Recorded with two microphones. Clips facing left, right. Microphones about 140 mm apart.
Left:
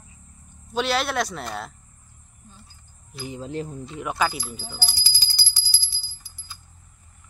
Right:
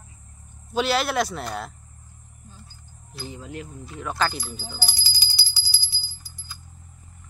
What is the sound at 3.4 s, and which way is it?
Speech, 30° left (ahead or behind).